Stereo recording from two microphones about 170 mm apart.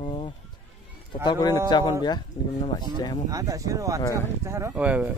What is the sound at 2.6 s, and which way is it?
Speech, 25° left (ahead or behind).